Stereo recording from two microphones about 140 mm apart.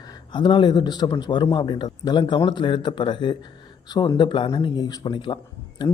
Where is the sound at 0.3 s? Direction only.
35° left (ahead or behind).